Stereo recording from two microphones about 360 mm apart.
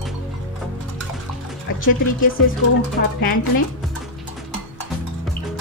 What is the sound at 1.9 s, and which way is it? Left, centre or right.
Speech, left.